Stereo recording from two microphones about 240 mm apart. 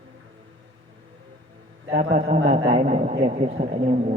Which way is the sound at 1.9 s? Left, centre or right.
Right.